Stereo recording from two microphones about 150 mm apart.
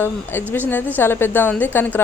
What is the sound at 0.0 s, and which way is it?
Speech, 15° left (ahead or behind).